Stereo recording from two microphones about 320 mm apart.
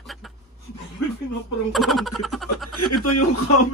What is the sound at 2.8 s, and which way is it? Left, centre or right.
Speech, left.